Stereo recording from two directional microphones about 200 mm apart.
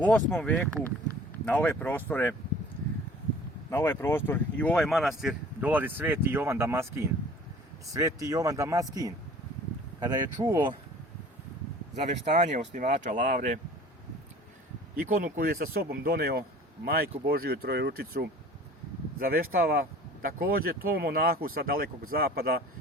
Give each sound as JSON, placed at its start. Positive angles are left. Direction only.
{"t": 0.0, "sound": "speech", "side_deg": 5}
{"t": 3.7, "sound": "speech", "side_deg": 10}
{"t": 11.9, "sound": "speech", "side_deg": -35}
{"t": 14.9, "sound": "speech", "side_deg": -45}
{"t": 19.3, "sound": "speech", "side_deg": -45}